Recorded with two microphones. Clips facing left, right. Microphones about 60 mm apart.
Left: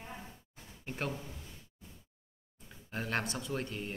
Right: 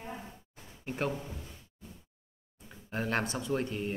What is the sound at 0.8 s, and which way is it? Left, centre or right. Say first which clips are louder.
Speech: right 5 dB; centre.